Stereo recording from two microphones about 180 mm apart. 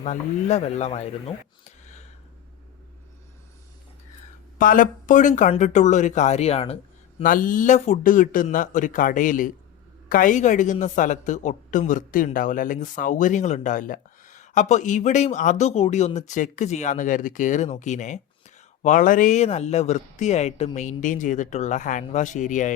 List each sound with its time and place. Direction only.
0.0 s speech: 40° left (ahead or behind)
4.5 s a woman's voice: 50° left (ahead or behind)
7.2 s a woman's voice: 50° left (ahead or behind)